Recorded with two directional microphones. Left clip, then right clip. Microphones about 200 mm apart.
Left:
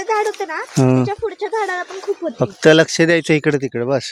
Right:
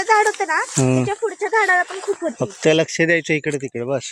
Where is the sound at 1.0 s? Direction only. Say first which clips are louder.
Even; centre (ahead or behind).